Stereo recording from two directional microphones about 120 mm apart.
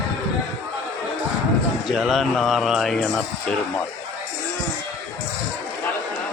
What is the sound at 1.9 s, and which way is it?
A man's voice, centre (ahead or behind).